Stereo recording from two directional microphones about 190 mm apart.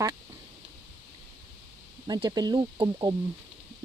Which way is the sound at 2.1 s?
20° right (ahead or behind).